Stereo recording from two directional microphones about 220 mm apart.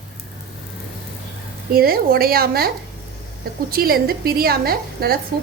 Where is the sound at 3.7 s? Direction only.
45° right (ahead or behind).